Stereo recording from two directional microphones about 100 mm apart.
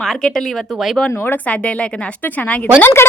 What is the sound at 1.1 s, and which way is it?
Speech, 20° left (ahead or behind).